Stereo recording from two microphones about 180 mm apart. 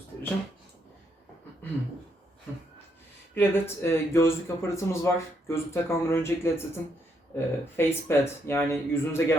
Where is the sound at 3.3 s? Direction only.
15° left (ahead or behind).